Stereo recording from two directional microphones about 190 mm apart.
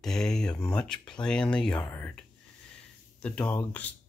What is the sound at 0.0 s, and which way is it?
Speech, centre (ahead or behind).